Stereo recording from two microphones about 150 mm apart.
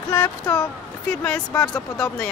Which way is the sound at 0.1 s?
25° left (ahead or behind).